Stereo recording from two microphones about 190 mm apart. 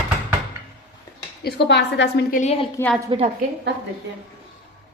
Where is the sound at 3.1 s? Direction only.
35° right (ahead or behind).